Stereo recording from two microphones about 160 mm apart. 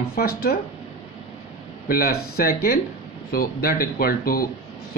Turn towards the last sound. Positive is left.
turn(degrees=65)  # may be behind; listen again after turning